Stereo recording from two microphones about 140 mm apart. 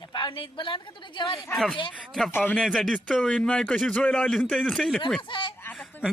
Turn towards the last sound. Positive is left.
turn(degrees=15)  # may be behind; listen again after turning